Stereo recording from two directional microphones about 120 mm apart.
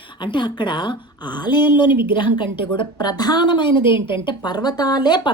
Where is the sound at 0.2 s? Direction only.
40° left (ahead or behind).